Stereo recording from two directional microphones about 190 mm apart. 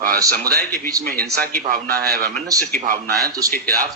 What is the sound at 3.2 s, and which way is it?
Speech, 20° right (ahead or behind).